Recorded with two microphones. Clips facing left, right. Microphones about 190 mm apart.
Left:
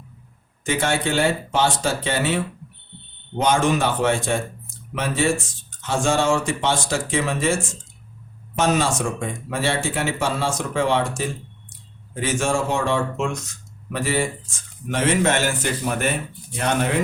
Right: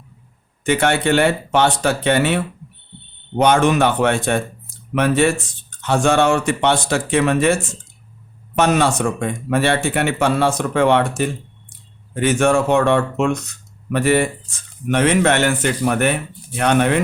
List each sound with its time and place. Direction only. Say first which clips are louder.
0.6 s a man's voice: right 5 dB; 65° right (ahead or behind)